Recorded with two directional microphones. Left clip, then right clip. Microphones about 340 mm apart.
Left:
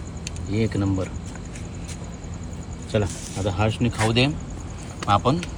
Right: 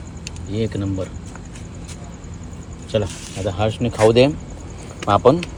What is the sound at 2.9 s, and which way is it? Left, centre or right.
Speech, centre.